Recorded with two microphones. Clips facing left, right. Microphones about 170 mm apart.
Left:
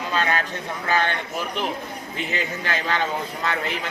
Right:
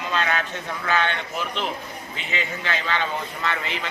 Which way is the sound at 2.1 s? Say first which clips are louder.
Left 2 dB; 45° left (ahead or behind).